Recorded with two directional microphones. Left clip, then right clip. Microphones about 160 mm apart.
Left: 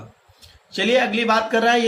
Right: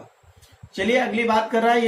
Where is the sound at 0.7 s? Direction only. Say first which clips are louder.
Left 3 dB; 50° left (ahead or behind).